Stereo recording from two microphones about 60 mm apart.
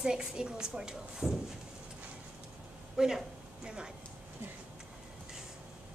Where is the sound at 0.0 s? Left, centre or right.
Centre.